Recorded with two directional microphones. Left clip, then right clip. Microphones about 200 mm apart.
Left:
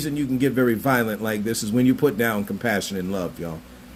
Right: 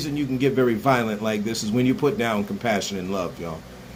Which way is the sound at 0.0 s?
50° left (ahead or behind).